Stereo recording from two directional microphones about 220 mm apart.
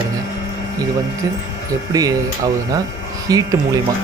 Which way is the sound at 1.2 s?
15° right (ahead or behind).